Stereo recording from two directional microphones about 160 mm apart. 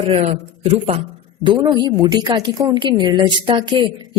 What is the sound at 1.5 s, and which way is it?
A woman's voice, 25° right (ahead or behind).